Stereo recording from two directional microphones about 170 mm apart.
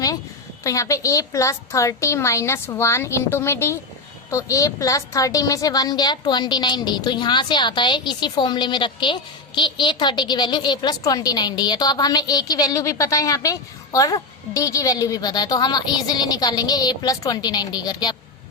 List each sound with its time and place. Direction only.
0.6 s a woman's voice: 20° left (ahead or behind)